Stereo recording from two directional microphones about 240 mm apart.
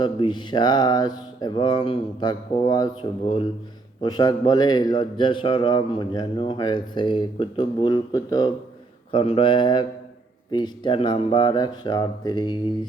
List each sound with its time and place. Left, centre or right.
0.0 s a man's voice: centre